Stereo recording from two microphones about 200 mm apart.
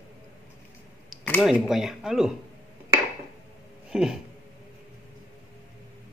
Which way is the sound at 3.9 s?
5° right (ahead or behind).